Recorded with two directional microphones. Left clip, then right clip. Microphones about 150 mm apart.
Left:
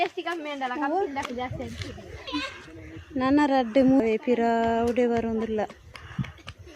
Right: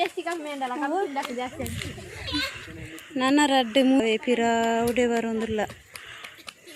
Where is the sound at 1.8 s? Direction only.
5° left (ahead or behind).